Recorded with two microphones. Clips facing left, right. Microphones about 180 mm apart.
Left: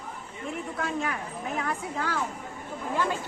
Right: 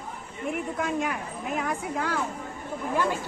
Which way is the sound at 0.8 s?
10° right (ahead or behind).